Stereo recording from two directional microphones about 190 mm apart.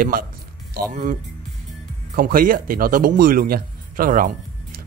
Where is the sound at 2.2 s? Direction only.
50° right (ahead or behind).